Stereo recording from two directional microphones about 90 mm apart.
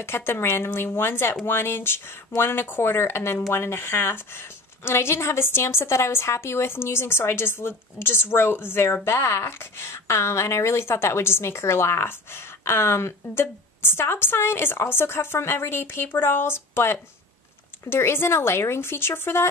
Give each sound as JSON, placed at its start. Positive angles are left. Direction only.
{"t": 0.0, "sound": "speech", "side_deg": 25}